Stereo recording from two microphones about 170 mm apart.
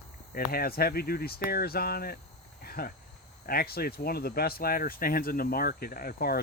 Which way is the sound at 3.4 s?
60° left (ahead or behind).